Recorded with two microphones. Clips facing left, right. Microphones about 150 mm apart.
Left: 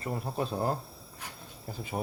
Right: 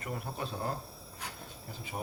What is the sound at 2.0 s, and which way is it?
Speech, 55° left (ahead or behind).